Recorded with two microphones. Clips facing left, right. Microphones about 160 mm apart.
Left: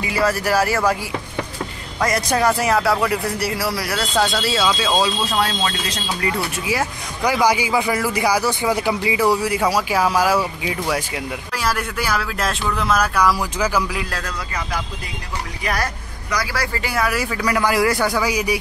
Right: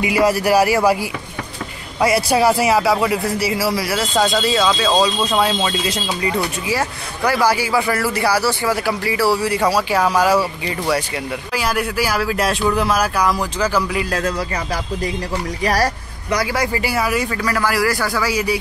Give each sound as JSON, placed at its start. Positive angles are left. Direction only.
{"t": 0.0, "sound": "speech", "side_deg": -15}
{"t": 2.0, "sound": "a man's voice", "side_deg": -10}
{"t": 6.7, "sound": "a man's voice", "side_deg": 10}
{"t": 15.6, "sound": "speech", "side_deg": -35}
{"t": 16.7, "sound": "a man's voice", "side_deg": -5}
{"t": 17.5, "sound": "a man's voice", "side_deg": 20}